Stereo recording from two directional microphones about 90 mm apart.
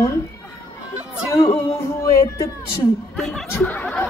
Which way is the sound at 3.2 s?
5° left (ahead or behind).